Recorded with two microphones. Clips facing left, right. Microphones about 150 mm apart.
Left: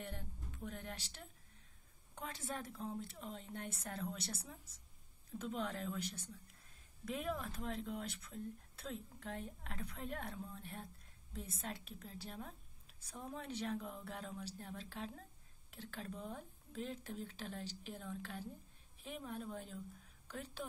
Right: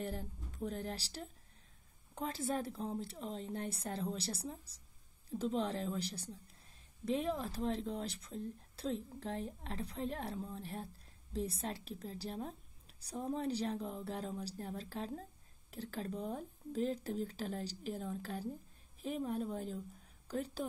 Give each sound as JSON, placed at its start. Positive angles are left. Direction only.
{"t": 0.0, "sound": "a woman's voice", "side_deg": -35}